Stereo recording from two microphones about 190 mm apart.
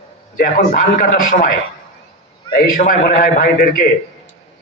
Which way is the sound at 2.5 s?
45° left (ahead or behind).